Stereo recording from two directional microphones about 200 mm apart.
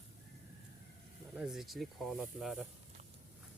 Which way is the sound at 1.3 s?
5° right (ahead or behind).